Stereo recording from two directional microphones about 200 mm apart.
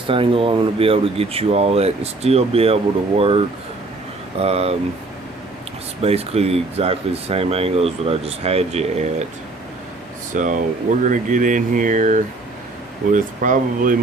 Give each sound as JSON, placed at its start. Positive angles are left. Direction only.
{"t": 0.1, "sound": "speech", "side_deg": -25}
{"t": 6.0, "sound": "speech", "side_deg": -30}
{"t": 10.3, "sound": "speech", "side_deg": -40}